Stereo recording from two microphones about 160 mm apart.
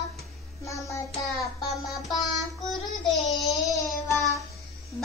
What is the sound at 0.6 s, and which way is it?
Child singing, 20° left (ahead or behind).